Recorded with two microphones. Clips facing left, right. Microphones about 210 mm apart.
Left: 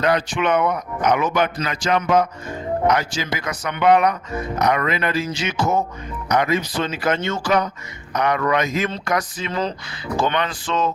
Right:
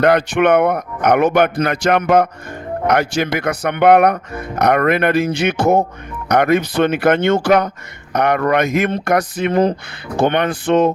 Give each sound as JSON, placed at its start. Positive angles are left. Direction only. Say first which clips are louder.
{"t": 0.0, "sound": "speech", "louder": "right 7 dB", "side_deg": -60}